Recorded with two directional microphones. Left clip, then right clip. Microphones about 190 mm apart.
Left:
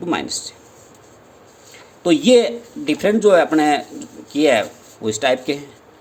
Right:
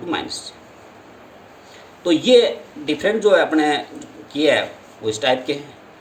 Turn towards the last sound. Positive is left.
turn(degrees=55)  # may be behind; listen again after turning